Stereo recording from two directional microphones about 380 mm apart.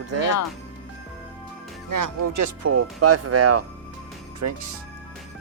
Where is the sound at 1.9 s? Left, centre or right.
Right.